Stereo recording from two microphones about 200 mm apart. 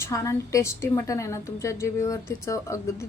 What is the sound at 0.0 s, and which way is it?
A woman's voice, 15° left (ahead or behind).